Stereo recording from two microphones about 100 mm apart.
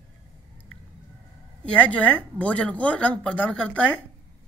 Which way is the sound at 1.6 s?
10° left (ahead or behind).